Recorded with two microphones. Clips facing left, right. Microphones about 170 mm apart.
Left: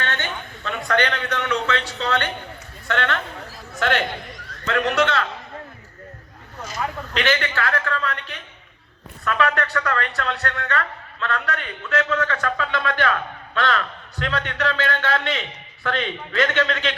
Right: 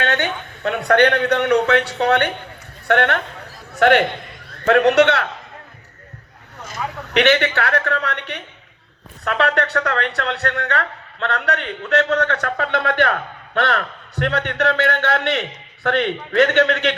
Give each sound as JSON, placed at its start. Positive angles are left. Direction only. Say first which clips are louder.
{"t": 0.0, "sound": "a man's voice", "louder": "right 7 dB", "side_deg": -65}
{"t": 6.7, "sound": "a man's voice", "louder": "even", "side_deg": -70}